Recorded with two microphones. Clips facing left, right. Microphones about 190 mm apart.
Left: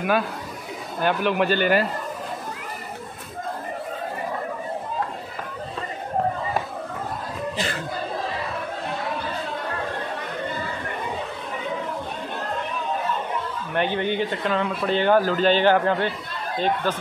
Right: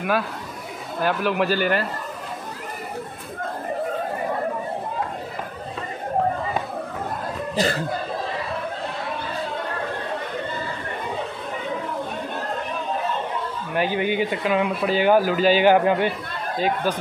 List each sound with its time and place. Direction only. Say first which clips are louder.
1.0 s speech: even; centre (ahead or behind)
7.5 s speech: right 10 dB; 40° right (ahead or behind)
13.7 s speech: right 1 dB; 10° right (ahead or behind)